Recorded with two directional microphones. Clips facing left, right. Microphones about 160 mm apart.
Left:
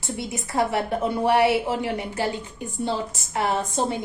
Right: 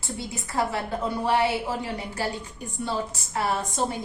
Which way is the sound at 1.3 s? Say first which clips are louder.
Left 4 dB; 75° left (ahead or behind).